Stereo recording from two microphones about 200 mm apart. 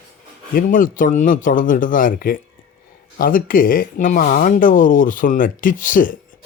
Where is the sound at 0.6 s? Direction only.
45° left (ahead or behind).